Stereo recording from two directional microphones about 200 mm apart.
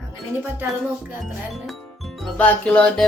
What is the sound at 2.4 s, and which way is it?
Speech, 5° left (ahead or behind).